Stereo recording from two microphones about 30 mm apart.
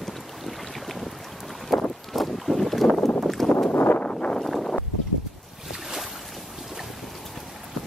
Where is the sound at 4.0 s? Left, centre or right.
Left.